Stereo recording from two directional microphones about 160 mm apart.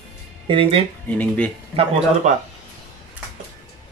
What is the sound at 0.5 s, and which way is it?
Speech, 35° right (ahead or behind).